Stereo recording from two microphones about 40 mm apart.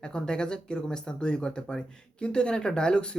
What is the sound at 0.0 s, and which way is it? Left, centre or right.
Speech, left.